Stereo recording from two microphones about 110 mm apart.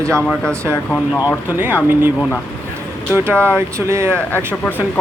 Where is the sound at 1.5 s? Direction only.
15° right (ahead or behind).